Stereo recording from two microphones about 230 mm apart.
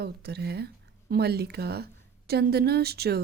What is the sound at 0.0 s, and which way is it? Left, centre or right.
Speech, right.